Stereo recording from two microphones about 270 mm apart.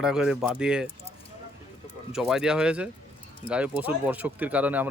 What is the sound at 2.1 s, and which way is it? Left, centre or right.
Speech, centre.